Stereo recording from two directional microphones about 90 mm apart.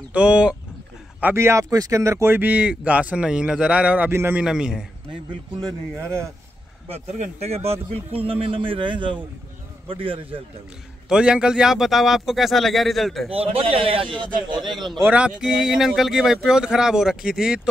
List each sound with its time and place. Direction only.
0.1 s speech: 15° right (ahead or behind)
1.3 s speech: 30° right (ahead or behind); by 4.1 s 15° right (ahead or behind)
4.1 s a man's voice: 30° right (ahead or behind)
4.4 s speech: 10° right (ahead or behind)
7.6 s a man's voice: 90° right; by 9.2 s 65° right (ahead or behind)
9.8 s a man's voice: 80° right
11.1 s a man's voice: 10° right (ahead or behind)
13.3 s a man's voice: 90° right; by 14.7 s 60° right (ahead or behind)
14.7 s a man's voice: centre (ahead or behind)
15.0 s speech: 10° right (ahead or behind)